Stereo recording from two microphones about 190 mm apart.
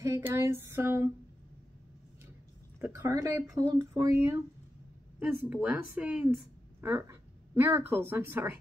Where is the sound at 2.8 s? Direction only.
10° right (ahead or behind).